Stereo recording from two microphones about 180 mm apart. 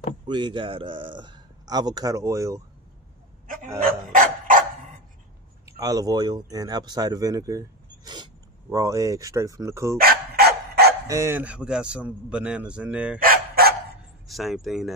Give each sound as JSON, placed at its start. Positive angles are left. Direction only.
{"t": 0.3, "sound": "a man's voice", "side_deg": -25}
{"t": 3.8, "sound": "dog", "side_deg": -50}
{"t": 5.7, "sound": "a man's voice", "side_deg": -20}
{"t": 9.9, "sound": "dog", "side_deg": -60}
{"t": 11.1, "sound": "a man's voice", "side_deg": -15}
{"t": 13.2, "sound": "dog", "side_deg": -55}
{"t": 14.2, "sound": "speech", "side_deg": 0}